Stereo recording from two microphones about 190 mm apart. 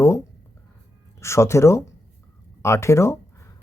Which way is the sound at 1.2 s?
15° left (ahead or behind).